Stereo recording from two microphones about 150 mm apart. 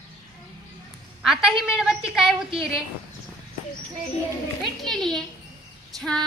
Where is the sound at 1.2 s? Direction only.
5° right (ahead or behind).